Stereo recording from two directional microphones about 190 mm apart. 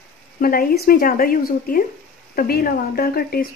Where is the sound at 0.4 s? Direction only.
50° left (ahead or behind).